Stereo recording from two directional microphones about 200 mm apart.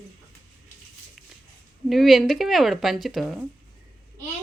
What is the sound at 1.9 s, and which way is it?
Speech, centre (ahead or behind).